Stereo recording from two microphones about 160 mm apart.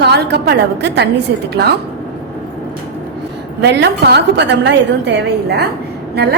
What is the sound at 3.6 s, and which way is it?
A woman's voice, 90° right.